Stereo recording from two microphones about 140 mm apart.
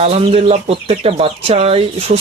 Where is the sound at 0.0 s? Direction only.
45° right (ahead or behind).